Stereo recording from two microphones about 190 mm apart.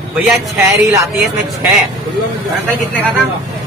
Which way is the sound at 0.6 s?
15° right (ahead or behind).